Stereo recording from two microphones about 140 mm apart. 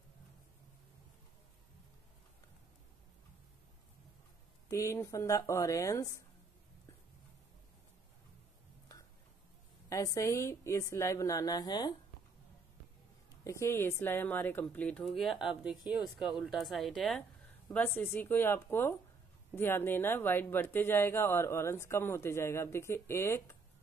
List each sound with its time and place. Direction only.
4.6 s a woman's voice: 20° left (ahead or behind)
9.8 s a woman's voice: 20° left (ahead or behind)
13.4 s speech: 20° left (ahead or behind); by 17.2 s centre (ahead or behind)
17.7 s speech: 15° left (ahead or behind)